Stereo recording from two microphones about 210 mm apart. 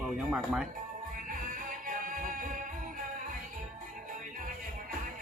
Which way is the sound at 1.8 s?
40° right (ahead or behind).